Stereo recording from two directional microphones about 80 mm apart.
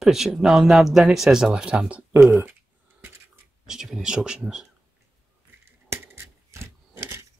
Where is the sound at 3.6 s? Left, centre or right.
Centre.